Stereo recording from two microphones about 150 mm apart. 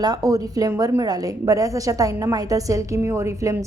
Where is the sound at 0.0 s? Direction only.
25° right (ahead or behind).